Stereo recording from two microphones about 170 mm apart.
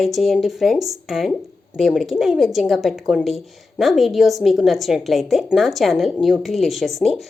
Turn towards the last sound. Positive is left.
turn(degrees=0)  # may be behind; listen again after turning